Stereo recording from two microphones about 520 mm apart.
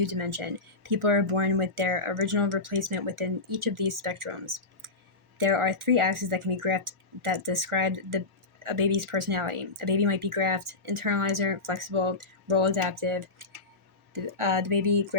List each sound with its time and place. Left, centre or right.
0.0 s speech: right